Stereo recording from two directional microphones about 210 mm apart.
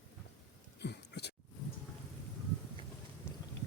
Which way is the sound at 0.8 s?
55° left (ahead or behind).